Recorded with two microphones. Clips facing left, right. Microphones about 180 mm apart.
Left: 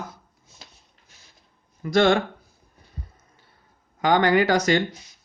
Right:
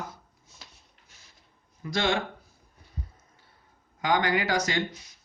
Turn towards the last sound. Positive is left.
turn(degrees=70)  # may be behind; listen again after turning